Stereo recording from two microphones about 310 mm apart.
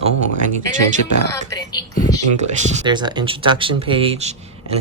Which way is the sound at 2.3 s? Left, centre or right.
Centre.